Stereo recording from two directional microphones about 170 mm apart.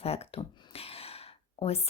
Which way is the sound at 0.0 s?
35° left (ahead or behind).